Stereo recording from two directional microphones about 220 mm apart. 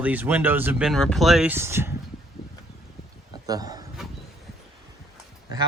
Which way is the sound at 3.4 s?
15° right (ahead or behind).